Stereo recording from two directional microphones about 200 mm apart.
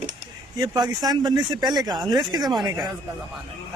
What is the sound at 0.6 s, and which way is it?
Speech, 20° right (ahead or behind).